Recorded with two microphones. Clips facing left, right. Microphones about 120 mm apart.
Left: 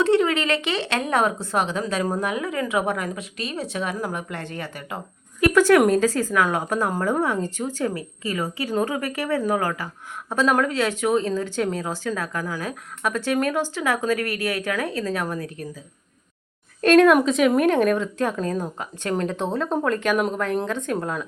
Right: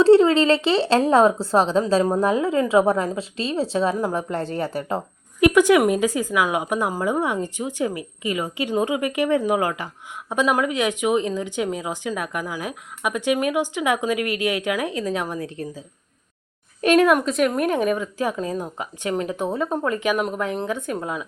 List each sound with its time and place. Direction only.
0.0 s a woman's voice: 30° right (ahead or behind)
5.4 s a woman's voice: 15° right (ahead or behind)
16.8 s a woman's voice: 10° right (ahead or behind)